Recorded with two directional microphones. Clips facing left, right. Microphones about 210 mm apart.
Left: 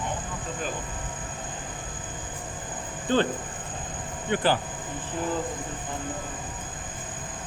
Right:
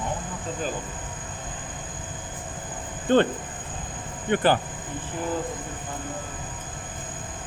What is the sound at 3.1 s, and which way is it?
Speech, 55° right (ahead or behind).